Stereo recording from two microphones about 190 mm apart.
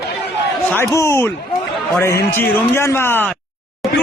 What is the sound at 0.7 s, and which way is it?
A man's voice, 15° left (ahead or behind).